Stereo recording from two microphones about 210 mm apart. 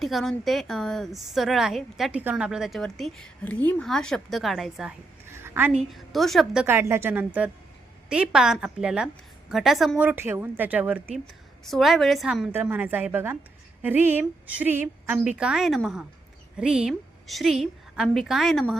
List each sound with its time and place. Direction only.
0.0 s a woman's voice: centre (ahead or behind)
5.9 s a woman's voice: centre (ahead or behind)